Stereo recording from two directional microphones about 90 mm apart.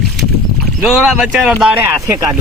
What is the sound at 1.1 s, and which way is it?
Speech, 5° right (ahead or behind).